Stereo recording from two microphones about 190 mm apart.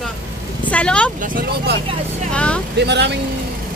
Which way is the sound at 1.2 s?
45° right (ahead or behind).